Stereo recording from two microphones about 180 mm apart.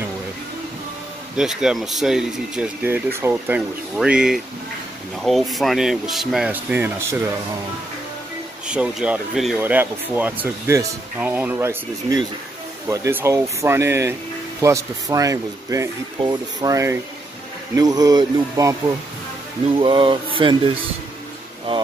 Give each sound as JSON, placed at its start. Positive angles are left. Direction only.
{"t": 1.3, "sound": "speech", "side_deg": -5}
{"t": 8.6, "sound": "speech", "side_deg": -5}